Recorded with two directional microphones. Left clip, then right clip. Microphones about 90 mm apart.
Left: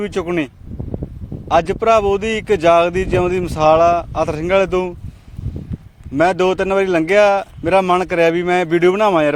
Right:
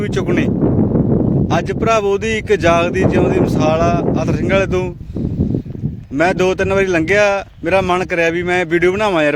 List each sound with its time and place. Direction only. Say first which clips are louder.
0.0 s speech: right 2 dB; 35° right (ahead or behind)
6.1 s speech: even; 35° right (ahead or behind)